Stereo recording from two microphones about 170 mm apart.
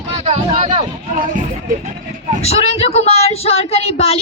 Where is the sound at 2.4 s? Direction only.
35° left (ahead or behind).